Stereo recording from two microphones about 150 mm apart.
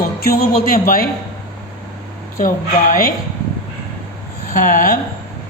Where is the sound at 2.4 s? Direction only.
65° left (ahead or behind).